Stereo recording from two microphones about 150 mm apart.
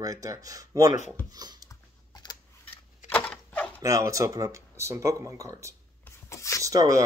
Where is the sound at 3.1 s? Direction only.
10° left (ahead or behind).